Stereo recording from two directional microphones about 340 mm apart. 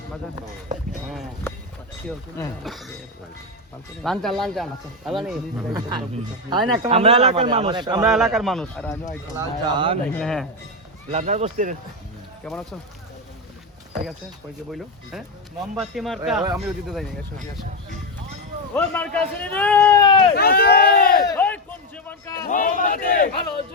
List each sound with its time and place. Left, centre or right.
1.0 s speech: centre
4.0 s speech: centre
6.5 s a man's voice: centre
8.0 s speech: centre
9.4 s a man's voice: centre
10.1 s speech: centre
11.1 s speech: centre
12.4 s speech: centre
15.6 s speech: centre
18.7 s speech: centre
20.3 s speech: left
21.3 s a sound: centre
22.4 s speech: left